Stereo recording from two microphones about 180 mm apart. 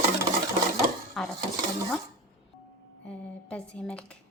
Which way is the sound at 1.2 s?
Centre (ahead or behind).